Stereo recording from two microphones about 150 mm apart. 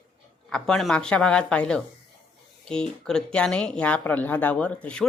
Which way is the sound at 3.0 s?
5° left (ahead or behind).